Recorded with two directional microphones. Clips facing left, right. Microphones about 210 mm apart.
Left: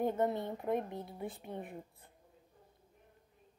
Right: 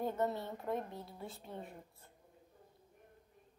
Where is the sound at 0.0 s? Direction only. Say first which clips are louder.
Left 4 dB; 20° left (ahead or behind).